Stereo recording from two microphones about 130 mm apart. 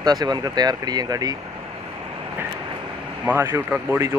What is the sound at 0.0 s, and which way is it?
Speech, 30° right (ahead or behind).